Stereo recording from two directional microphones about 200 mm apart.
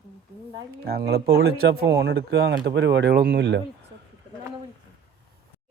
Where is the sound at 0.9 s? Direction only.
50° right (ahead or behind).